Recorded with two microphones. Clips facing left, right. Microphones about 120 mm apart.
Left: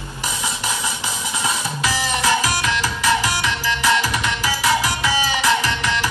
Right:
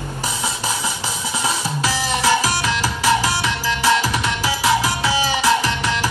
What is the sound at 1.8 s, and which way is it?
Music, 30° right (ahead or behind).